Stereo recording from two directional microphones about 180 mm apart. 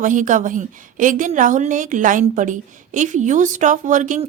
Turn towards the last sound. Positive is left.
turn(degrees=-45)  # may be behind; listen again after turning